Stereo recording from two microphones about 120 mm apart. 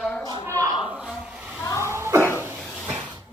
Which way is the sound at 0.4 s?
25° right (ahead or behind).